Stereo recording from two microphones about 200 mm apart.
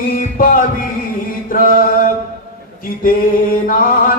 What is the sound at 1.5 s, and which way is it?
Chant, 45° left (ahead or behind).